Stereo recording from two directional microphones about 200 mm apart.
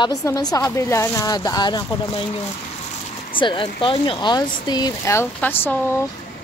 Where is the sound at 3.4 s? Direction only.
25° left (ahead or behind).